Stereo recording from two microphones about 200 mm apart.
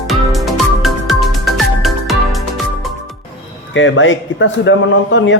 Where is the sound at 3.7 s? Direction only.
70° left (ahead or behind).